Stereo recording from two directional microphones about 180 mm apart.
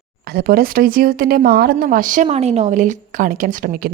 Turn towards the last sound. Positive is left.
turn(degrees=-50)  # may be behind; listen again after turning